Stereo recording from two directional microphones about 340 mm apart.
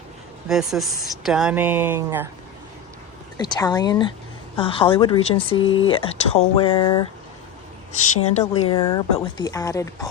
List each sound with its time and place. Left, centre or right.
0.4 s speech: centre
3.3 s speech: centre
5.5 s speech: left
5.9 s speech: centre
8.2 s speech: centre